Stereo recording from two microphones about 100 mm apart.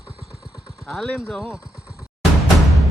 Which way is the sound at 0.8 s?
Centre (ahead or behind).